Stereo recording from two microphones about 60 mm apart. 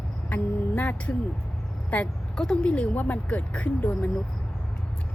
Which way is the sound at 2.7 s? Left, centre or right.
Left.